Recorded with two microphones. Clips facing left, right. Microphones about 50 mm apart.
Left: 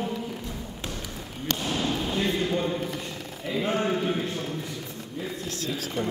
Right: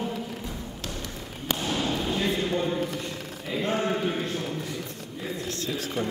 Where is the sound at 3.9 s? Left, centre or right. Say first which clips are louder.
Left 1 dB; centre.